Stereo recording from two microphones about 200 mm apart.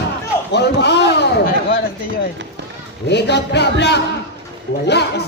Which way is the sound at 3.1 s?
60° left (ahead or behind).